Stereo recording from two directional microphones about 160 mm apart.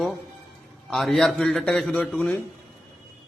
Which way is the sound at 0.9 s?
Centre (ahead or behind).